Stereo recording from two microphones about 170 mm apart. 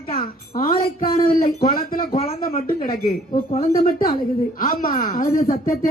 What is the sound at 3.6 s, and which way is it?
Speech, 60° left (ahead or behind).